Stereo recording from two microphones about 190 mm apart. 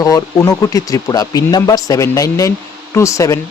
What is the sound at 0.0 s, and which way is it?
Speech, 20° left (ahead or behind).